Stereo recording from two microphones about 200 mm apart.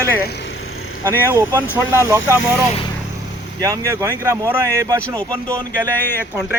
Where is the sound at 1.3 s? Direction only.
10° right (ahead or behind).